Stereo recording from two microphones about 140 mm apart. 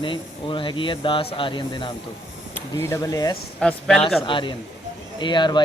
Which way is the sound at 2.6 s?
20° left (ahead or behind).